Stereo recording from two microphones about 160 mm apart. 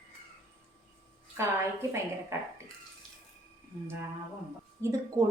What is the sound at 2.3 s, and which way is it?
Speech, 15° right (ahead or behind).